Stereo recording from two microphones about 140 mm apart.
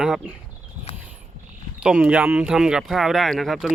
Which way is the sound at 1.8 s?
10° right (ahead or behind).